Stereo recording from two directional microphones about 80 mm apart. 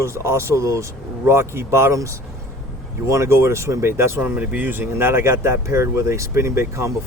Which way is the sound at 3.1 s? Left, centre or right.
Right.